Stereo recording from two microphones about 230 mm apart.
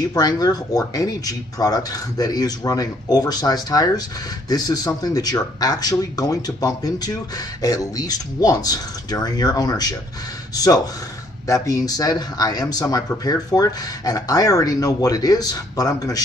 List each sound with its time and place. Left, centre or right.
0.1 s speech: centre